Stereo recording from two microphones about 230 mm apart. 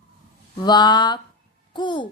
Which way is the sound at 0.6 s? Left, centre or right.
Centre.